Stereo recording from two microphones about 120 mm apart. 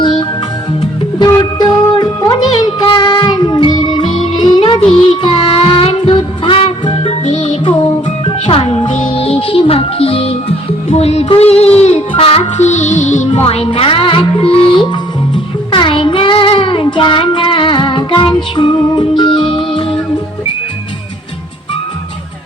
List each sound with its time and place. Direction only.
0.0 s music: 40° left (ahead or behind)
1.4 s music: 35° left (ahead or behind); by 7.6 s 70° left (ahead or behind)
8.2 s music: 50° left (ahead or behind); by 13.4 s 80° left
13.4 s music: 55° left (ahead or behind)
15.7 s child singing: 45° left (ahead or behind)
18.5 s music: 40° left (ahead or behind)